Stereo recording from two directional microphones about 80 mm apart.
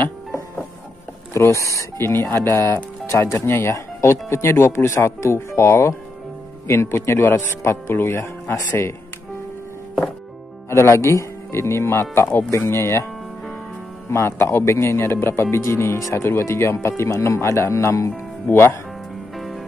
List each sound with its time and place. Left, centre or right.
1.3 s speech: left
10.7 s speech: left
14.1 s speech: left
19.3 s music: centre